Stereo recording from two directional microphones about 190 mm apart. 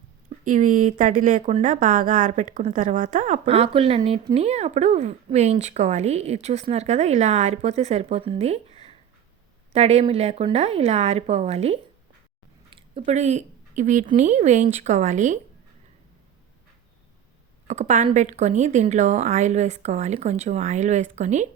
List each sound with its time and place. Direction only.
0.4 s speech: 40° right (ahead or behind)
12.7 s a sound: 25° right (ahead or behind)
13.1 s speech: 35° right (ahead or behind)
17.7 s speech: 40° right (ahead or behind)